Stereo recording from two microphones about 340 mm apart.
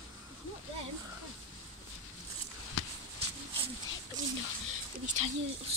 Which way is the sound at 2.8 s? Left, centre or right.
Left.